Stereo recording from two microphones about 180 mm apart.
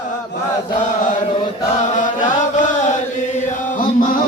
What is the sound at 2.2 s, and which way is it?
Chant, 45° left (ahead or behind).